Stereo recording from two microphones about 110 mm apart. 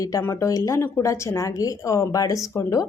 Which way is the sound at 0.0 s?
25° left (ahead or behind).